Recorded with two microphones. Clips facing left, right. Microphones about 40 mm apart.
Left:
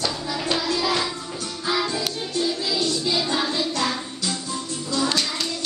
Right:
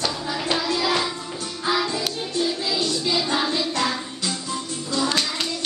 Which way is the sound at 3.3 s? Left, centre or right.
Centre.